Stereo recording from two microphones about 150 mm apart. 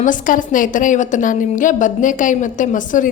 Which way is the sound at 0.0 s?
60° left (ahead or behind).